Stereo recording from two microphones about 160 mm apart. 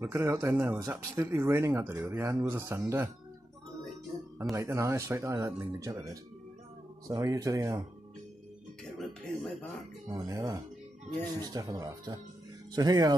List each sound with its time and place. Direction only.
0.0 s speech: 15° right (ahead or behind)
4.6 s speech: 15° right (ahead or behind)
8.9 s music: centre (ahead or behind)
10.0 s speech: 20° right (ahead or behind)